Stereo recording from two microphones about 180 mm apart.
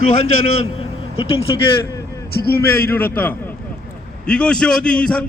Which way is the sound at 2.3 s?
60° left (ahead or behind).